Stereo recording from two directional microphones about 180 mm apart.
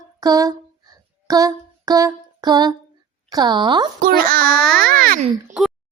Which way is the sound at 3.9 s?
55° right (ahead or behind).